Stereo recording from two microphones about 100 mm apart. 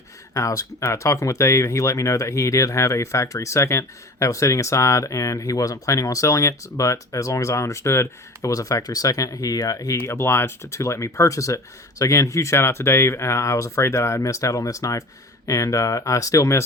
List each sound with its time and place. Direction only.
0.3 s speech: 35° left (ahead or behind)